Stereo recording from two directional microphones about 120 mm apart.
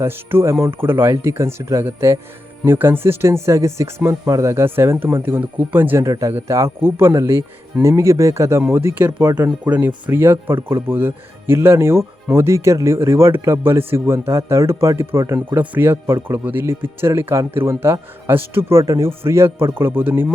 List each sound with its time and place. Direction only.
0.0 s speech: 20° right (ahead or behind)